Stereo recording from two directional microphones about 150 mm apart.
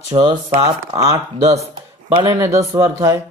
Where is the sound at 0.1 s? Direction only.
30° right (ahead or behind).